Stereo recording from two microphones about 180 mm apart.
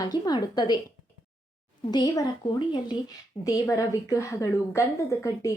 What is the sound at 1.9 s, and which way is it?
A woman's voice, 25° left (ahead or behind).